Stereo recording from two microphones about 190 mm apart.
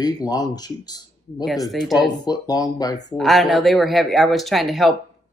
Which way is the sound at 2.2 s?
20° left (ahead or behind).